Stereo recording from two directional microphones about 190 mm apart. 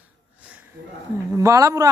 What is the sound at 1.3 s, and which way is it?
Speech, 15° right (ahead or behind).